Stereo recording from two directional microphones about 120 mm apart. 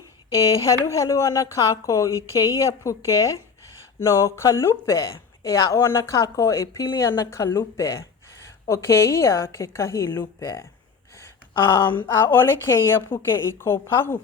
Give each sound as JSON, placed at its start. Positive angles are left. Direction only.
{"t": 0.6, "sound": "a woman's voice", "side_deg": 25}
{"t": 7.5, "sound": "a woman's voice", "side_deg": 25}